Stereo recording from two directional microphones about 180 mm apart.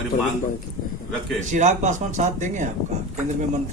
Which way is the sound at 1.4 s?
40° right (ahead or behind).